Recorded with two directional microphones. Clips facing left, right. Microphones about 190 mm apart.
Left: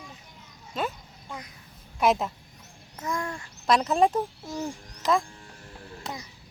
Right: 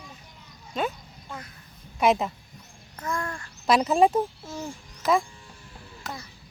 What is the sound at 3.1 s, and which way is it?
Speech, 15° left (ahead or behind).